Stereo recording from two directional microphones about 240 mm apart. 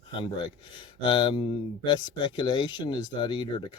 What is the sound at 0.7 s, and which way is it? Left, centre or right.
Speech, centre.